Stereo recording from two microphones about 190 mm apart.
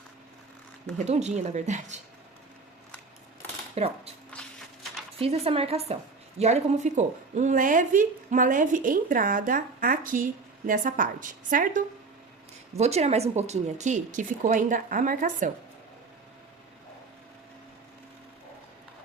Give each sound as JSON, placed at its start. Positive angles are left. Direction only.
{"t": 0.9, "sound": "speech", "side_deg": -35}
{"t": 3.8, "sound": "speech", "side_deg": -35}
{"t": 4.3, "sound": "a sound", "side_deg": 5}
{"t": 5.2, "sound": "speech", "side_deg": -30}